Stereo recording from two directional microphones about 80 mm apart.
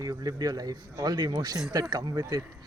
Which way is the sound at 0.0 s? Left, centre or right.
Right.